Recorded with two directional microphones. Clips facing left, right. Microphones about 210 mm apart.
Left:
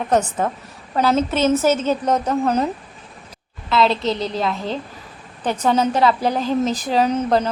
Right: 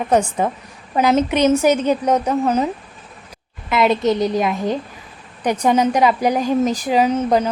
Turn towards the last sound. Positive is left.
turn(degrees=-10)  # may be behind; listen again after turning